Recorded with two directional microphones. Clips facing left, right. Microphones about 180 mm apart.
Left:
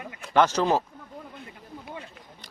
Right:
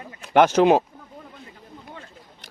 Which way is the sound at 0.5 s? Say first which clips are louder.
Right 7 dB; 65° right (ahead or behind).